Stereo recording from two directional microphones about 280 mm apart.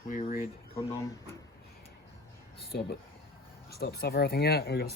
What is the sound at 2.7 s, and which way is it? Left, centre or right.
Speech, left.